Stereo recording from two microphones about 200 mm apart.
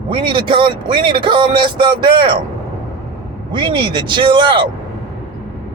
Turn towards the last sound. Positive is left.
turn(degrees=-25)  # may be behind; listen again after turning